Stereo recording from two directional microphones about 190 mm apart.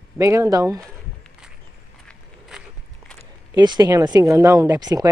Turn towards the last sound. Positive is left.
turn(degrees=-20)  # may be behind; listen again after turning